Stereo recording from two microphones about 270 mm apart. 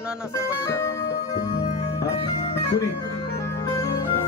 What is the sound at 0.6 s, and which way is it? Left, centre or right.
Music, centre.